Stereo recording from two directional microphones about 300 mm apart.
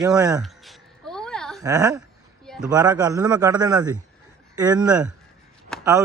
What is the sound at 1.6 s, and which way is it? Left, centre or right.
Speech, centre.